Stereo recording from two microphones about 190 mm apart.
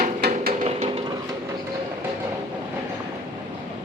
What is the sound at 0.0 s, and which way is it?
Music, 55° right (ahead or behind).